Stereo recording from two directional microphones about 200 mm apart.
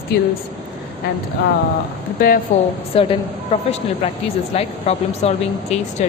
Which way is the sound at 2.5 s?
35° left (ahead or behind).